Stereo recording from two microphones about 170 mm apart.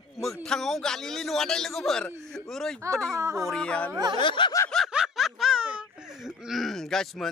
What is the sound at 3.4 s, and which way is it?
Speech, 5° left (ahead or behind).